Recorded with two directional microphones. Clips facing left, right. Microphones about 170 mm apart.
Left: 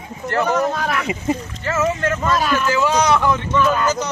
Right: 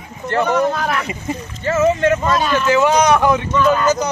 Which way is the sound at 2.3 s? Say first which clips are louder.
Right 2 dB; centre (ahead or behind).